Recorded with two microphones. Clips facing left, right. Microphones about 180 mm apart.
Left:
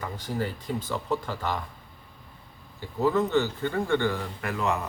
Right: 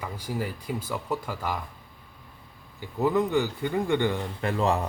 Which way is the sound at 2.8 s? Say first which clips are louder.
Even; 15° right (ahead or behind).